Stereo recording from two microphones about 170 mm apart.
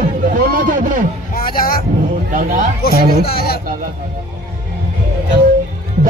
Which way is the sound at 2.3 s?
50° right (ahead or behind).